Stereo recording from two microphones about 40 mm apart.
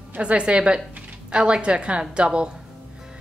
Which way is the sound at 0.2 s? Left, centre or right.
Right.